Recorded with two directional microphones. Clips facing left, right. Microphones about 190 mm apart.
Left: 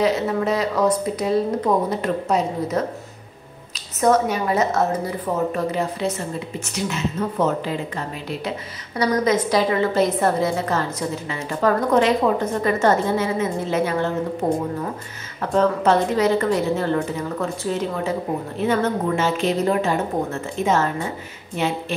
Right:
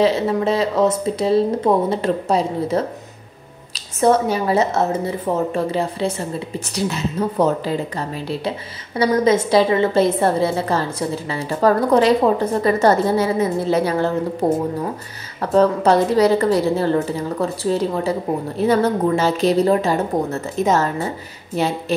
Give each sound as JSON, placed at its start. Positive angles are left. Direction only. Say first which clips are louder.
{"t": 0.0, "sound": "speech", "louder": "right 3 dB", "side_deg": -30}
{"t": 4.0, "sound": "a woman's voice", "louder": "right 2 dB", "side_deg": -30}
{"t": 8.9, "sound": "a woman's voice", "louder": "right 3 dB", "side_deg": -30}